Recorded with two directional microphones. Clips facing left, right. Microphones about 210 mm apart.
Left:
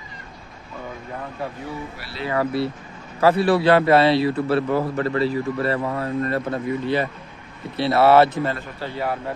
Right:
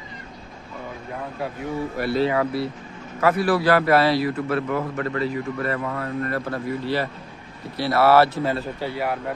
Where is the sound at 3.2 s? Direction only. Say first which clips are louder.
Left 3 dB; 25° left (ahead or behind).